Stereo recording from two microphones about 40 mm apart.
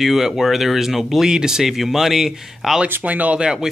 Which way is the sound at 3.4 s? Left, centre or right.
Centre.